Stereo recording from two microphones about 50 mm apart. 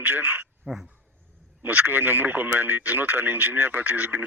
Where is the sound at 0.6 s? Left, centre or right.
Centre.